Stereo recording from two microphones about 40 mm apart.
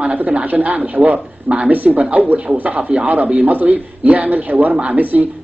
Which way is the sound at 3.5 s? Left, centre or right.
Right.